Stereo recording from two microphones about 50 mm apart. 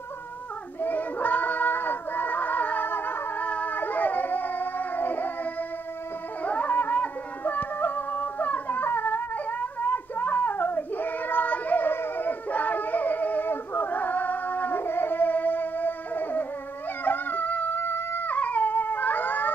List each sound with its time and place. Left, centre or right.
0.7 s child singing: left
3.4 s dog: left
3.7 s howl: left
6.4 s music: left
17.0 s howl: left
17.7 s howl: left